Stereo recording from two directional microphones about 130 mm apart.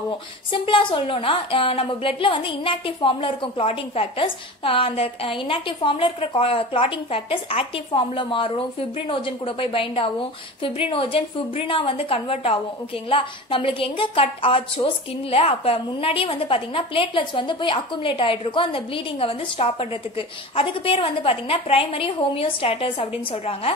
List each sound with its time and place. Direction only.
0.5 s a woman's voice: 40° left (ahead or behind)